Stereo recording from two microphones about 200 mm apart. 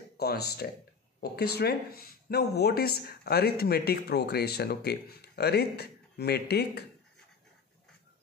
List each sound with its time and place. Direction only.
0.2 s speech: 50° left (ahead or behind)